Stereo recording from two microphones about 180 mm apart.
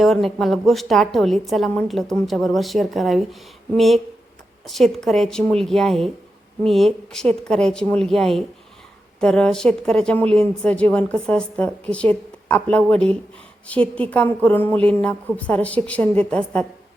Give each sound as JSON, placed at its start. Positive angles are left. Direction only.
{"t": 0.0, "sound": "a woman's voice", "side_deg": 0}